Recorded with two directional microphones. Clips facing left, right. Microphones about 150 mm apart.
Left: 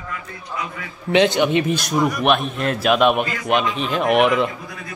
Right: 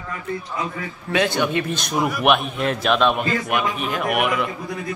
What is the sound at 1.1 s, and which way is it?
Speech, 20° left (ahead or behind).